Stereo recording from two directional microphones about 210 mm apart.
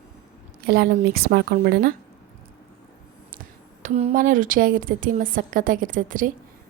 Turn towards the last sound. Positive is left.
turn(degrees=-40)  # may be behind; listen again after turning